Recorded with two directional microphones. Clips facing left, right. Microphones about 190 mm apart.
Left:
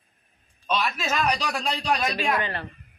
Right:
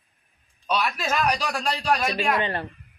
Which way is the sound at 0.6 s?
10° right (ahead or behind).